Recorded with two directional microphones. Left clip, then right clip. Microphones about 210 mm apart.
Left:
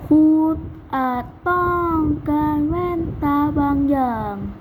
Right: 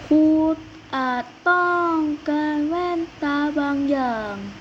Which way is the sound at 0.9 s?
50° left (ahead or behind).